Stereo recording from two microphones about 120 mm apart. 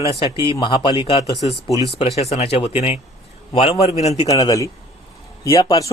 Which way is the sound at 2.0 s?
60° left (ahead or behind).